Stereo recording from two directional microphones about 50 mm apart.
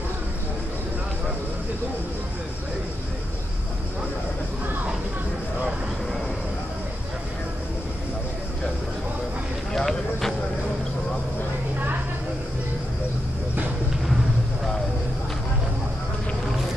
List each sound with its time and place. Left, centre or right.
9.7 s run: centre